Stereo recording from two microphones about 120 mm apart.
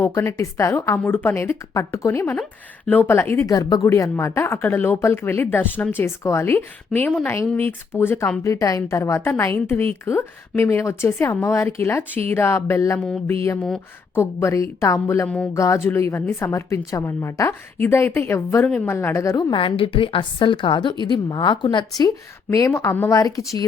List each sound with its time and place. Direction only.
0.1 s a woman's voice: 25° left (ahead or behind)
3.4 s a woman's voice: 30° left (ahead or behind)
13.6 s speech: 5° left (ahead or behind)
14.2 s speech: 20° left (ahead or behind)
19.5 s a woman's voice: 45° left (ahead or behind)
22.4 s speech: 25° left (ahead or behind)